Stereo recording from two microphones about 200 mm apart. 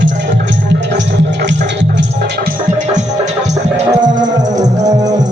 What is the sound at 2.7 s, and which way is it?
Music, 35° right (ahead or behind).